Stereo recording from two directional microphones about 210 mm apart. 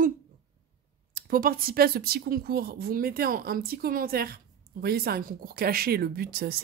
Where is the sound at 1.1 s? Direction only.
40° right (ahead or behind).